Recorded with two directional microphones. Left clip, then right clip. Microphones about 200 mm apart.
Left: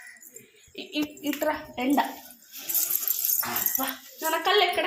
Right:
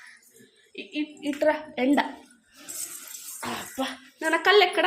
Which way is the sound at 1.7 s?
55° right (ahead or behind).